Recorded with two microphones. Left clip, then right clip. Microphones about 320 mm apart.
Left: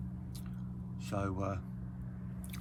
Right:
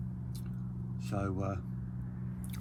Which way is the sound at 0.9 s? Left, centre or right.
Centre.